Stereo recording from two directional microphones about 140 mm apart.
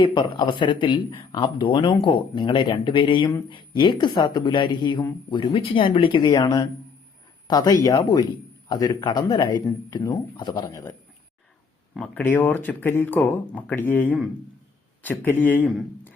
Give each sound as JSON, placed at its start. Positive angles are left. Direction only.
{"t": 0.0, "sound": "speech", "side_deg": 35}
{"t": 11.9, "sound": "speech", "side_deg": 5}
{"t": 12.2, "sound": "speech", "side_deg": 15}